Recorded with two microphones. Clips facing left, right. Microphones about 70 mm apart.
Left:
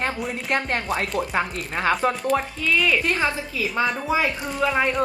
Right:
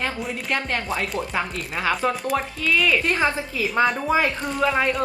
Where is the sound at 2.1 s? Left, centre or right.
Centre.